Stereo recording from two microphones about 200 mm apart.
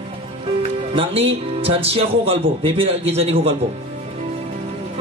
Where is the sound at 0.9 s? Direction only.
30° right (ahead or behind).